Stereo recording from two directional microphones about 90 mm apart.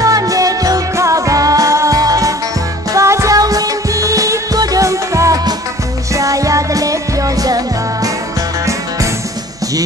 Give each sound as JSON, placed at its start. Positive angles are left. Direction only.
{"t": 0.0, "sound": "music", "side_deg": -40}